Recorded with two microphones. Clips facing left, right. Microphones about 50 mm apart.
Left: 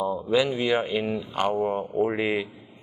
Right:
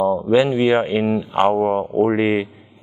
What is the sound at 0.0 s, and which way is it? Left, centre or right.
Speech, right.